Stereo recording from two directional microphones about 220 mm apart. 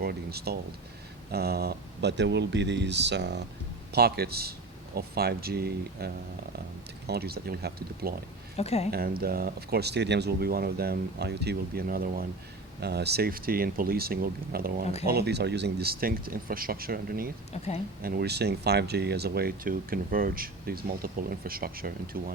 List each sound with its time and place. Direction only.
0.0 s speech: 45° right (ahead or behind)
7.1 s speech: 45° right (ahead or behind)
8.5 s speech: 30° left (ahead or behind)
8.9 s speech: 45° right (ahead or behind)